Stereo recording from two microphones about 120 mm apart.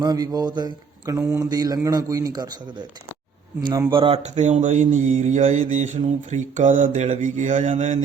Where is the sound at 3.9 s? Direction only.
45° right (ahead or behind).